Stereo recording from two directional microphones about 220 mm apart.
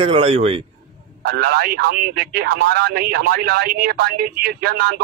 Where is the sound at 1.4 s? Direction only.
45° right (ahead or behind).